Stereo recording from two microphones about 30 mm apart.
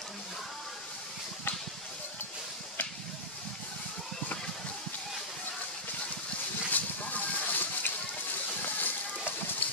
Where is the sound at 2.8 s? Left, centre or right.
Left.